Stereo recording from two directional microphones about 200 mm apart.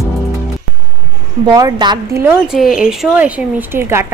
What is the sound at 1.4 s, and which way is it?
A woman's voice, 20° right (ahead or behind).